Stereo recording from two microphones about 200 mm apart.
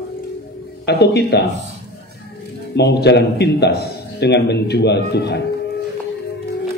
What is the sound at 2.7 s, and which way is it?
A man's voice, 55° left (ahead or behind).